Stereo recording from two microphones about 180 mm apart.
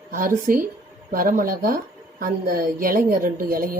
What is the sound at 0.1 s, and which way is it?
Speech, 50° right (ahead or behind).